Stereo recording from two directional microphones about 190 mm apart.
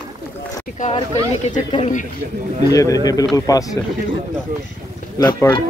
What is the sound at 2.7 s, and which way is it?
Speech, 20° left (ahead or behind).